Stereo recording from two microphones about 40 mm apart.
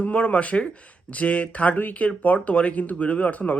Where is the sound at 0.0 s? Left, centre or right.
Left.